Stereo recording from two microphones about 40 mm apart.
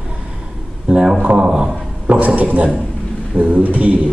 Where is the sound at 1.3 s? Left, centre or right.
Right.